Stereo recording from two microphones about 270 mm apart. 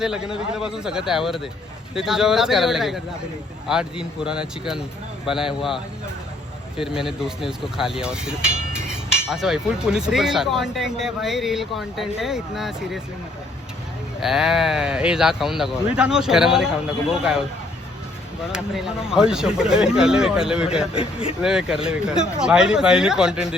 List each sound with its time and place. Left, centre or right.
0.0 s speech: centre
6.7 s speech: centre
14.2 s speech: centre
18.5 s speech: centre
20.9 s speech: left
21.4 s speech: centre